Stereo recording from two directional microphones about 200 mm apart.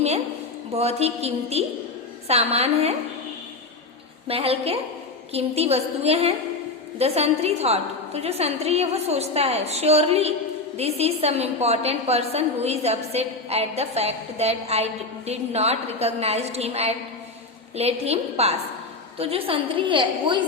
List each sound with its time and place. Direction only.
0.7 s a woman's voice: 30° right (ahead or behind)
4.3 s a woman's voice: 30° right (ahead or behind)